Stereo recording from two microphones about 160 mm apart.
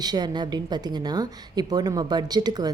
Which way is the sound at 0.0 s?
25° right (ahead or behind).